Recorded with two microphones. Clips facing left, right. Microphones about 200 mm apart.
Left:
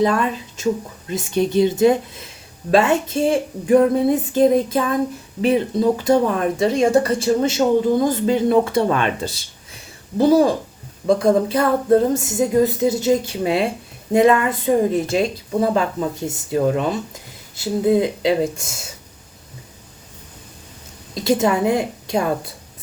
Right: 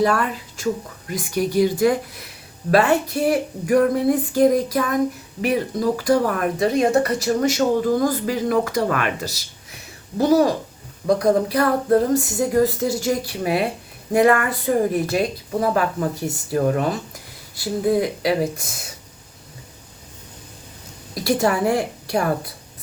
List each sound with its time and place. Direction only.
0.0 s speech: 20° left (ahead or behind)
21.2 s speech: 20° left (ahead or behind)